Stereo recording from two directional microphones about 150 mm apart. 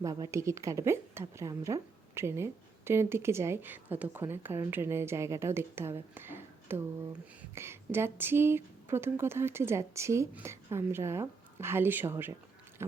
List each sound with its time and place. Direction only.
0.0 s a woman's voice: 20° right (ahead or behind)